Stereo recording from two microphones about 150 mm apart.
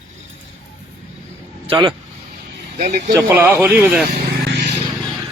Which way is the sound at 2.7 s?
70° right (ahead or behind).